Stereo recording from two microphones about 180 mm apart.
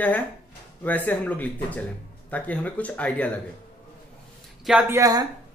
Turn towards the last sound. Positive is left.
turn(degrees=-20)  # may be behind; listen again after turning